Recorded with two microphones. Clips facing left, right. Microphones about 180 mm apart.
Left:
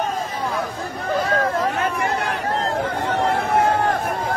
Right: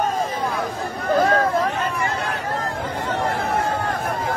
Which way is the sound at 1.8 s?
70° left (ahead or behind).